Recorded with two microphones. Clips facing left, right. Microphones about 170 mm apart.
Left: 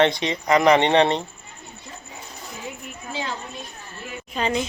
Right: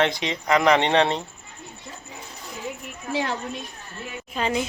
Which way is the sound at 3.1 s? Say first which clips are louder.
Right 4 dB; 65° right (ahead or behind).